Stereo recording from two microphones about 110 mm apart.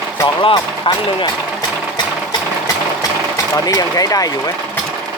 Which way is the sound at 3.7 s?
35° left (ahead or behind).